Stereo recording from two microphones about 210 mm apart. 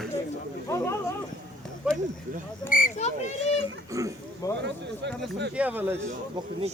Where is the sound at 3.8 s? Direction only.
15° right (ahead or behind).